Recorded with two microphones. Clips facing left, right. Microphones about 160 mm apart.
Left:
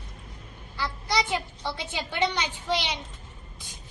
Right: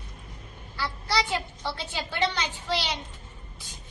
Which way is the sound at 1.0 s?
15° left (ahead or behind).